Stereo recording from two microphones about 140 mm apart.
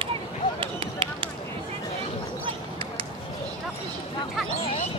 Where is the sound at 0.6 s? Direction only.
40° right (ahead or behind).